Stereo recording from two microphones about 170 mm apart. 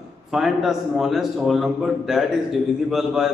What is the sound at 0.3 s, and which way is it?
A man's voice, centre (ahead or behind).